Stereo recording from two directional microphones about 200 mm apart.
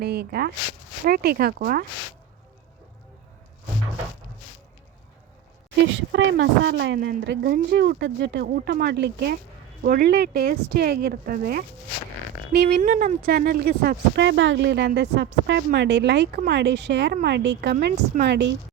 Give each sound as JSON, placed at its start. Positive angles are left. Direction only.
{"t": 0.0, "sound": "speech", "side_deg": -55}
{"t": 5.9, "sound": "speech", "side_deg": -65}